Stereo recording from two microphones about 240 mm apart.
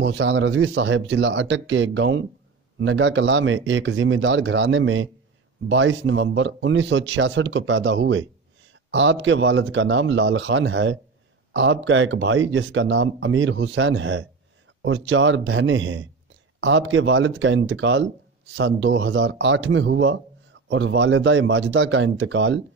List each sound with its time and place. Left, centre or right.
0.0 s speech: right